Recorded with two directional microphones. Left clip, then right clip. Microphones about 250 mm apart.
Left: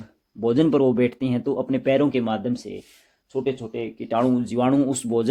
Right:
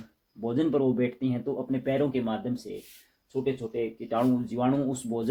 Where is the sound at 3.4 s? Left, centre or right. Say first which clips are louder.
Even; left.